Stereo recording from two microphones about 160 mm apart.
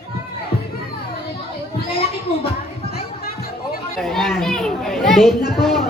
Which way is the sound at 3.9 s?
Centre (ahead or behind).